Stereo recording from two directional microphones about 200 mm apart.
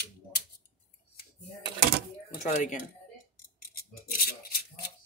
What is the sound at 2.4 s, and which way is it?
Speech, 40° left (ahead or behind).